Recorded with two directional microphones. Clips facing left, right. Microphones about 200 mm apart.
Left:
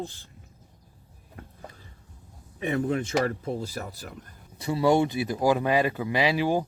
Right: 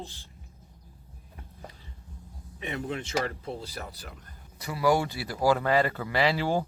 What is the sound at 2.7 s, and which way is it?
Speech, 45° left (ahead or behind).